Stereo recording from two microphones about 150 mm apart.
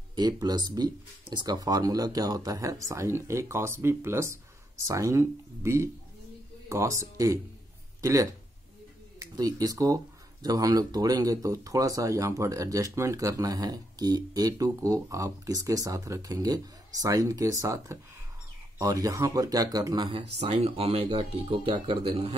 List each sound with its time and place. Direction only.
0.1 s speech: 25° right (ahead or behind)
20.1 s speech: 40° right (ahead or behind)